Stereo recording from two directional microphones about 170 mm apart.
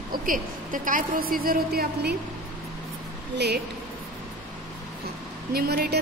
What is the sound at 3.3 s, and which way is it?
Speech, 75° right (ahead or behind).